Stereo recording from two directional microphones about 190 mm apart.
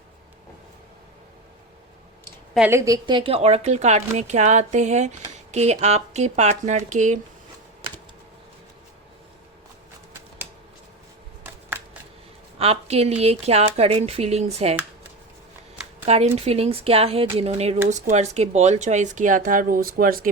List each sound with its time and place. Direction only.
2.6 s speech: 15° right (ahead or behind); by 7.2 s 40° right (ahead or behind)
12.5 s speech: 30° right (ahead or behind)
16.0 s speech: 35° right (ahead or behind); by 20.3 s 50° right (ahead or behind)